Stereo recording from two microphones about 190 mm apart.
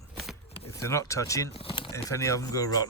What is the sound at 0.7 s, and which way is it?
Speech, 15° left (ahead or behind).